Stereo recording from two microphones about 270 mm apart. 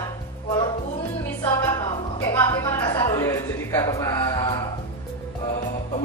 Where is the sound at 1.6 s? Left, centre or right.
Centre.